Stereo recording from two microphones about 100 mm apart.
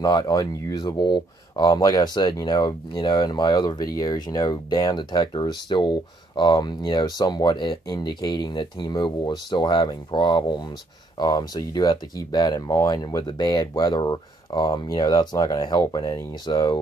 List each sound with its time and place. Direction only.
0.0 s speech: 45° left (ahead or behind)